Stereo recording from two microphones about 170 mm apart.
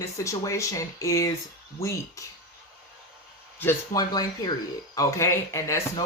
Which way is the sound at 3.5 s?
15° left (ahead or behind).